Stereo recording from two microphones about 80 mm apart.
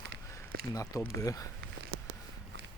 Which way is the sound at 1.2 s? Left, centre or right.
Left.